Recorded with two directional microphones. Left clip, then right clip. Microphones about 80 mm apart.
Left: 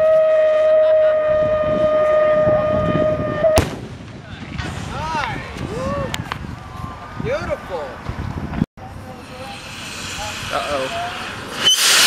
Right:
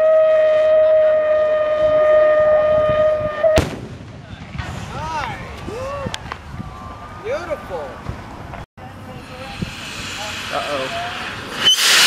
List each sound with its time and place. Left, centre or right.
0.0 s a sound: centre
0.9 s civil defense siren: centre
4.9 s vehicle: left
5.8 s a sound: left
7.2 s vehicle: left
9.6 s vehicle: centre